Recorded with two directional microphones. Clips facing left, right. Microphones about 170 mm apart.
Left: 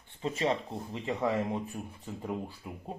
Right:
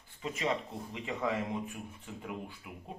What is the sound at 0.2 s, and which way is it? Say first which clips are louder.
Speech: left 4 dB; 30° left (ahead or behind).